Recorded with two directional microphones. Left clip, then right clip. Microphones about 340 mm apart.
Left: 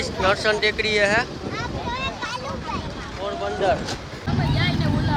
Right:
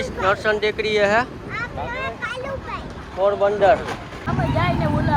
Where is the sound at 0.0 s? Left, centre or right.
Centre.